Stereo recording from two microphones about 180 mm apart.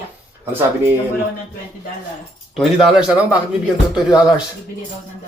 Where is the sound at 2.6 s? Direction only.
Centre (ahead or behind).